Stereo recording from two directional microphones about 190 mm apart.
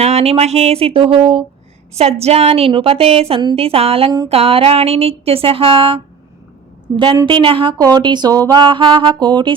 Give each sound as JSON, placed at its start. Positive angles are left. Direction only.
{"t": 0.0, "sound": "a woman's voice", "side_deg": -35}
{"t": 6.9, "sound": "music", "side_deg": -25}